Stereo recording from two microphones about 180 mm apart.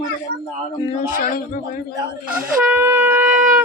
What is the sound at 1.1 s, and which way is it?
Speech, 50° left (ahead or behind).